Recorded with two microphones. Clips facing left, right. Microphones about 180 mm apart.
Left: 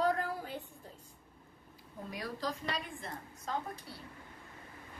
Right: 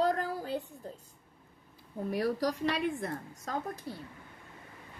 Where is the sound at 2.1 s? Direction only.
65° right (ahead or behind).